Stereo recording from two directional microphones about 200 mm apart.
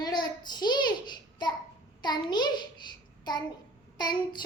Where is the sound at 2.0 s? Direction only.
20° left (ahead or behind).